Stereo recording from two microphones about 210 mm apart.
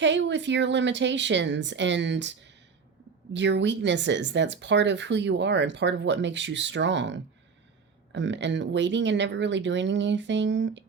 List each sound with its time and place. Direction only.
0.0 s speech: 60° right (ahead or behind)